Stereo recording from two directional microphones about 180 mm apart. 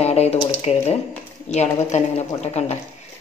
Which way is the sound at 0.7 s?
40° left (ahead or behind).